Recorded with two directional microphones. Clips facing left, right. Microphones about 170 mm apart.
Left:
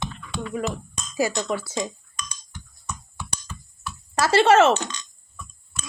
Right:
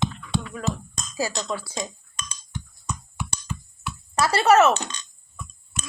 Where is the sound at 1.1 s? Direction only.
20° left (ahead or behind).